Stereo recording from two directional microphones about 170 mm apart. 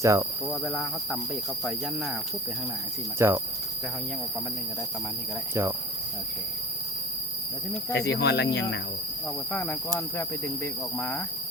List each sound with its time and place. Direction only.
0.0 s speech: 20° right (ahead or behind)
0.5 s speech: centre (ahead or behind)
3.2 s speech: 15° right (ahead or behind)
7.9 s speech: 80° left
9.5 s speech: 10° left (ahead or behind)